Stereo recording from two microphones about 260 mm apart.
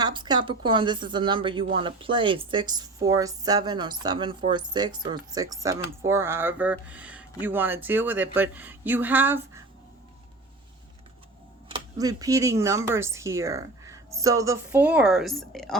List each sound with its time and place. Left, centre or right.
0.0 s a woman's voice: centre
11.7 s a woman's voice: centre